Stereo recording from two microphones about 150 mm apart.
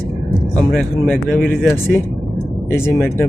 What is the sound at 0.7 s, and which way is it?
Speech, centre (ahead or behind).